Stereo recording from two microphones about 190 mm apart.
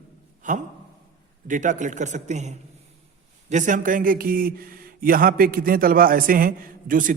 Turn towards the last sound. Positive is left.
turn(degrees=-45)  # may be behind; listen again after turning